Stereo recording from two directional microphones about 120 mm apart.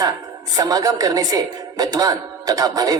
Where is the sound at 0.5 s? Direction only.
30° right (ahead or behind).